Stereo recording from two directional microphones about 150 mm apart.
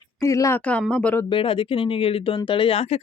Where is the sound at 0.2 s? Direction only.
20° left (ahead or behind).